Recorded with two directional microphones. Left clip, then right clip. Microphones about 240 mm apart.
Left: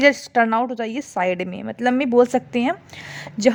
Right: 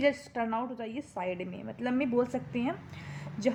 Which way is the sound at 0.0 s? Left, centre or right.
Left.